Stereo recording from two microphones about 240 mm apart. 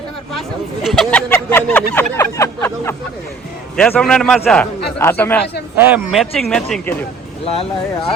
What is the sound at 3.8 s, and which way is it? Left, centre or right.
Speech, centre.